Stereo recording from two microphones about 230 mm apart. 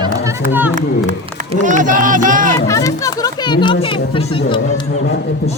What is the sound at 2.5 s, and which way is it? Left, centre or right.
Speech, centre.